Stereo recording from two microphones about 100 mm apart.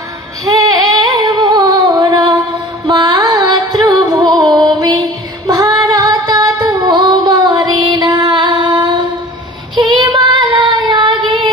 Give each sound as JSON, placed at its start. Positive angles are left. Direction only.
{"t": 0.6, "sound": "female singing", "side_deg": -45}
{"t": 1.5, "sound": "music", "side_deg": -40}
{"t": 2.9, "sound": "carnatic music", "side_deg": -45}
{"t": 3.8, "sound": "music", "side_deg": -40}
{"t": 5.5, "sound": "child singing", "side_deg": -35}
{"t": 6.8, "sound": "music", "side_deg": -50}
{"t": 9.8, "sound": "child singing", "side_deg": -50}